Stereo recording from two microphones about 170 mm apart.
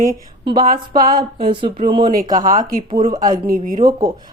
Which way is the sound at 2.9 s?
30° right (ahead or behind).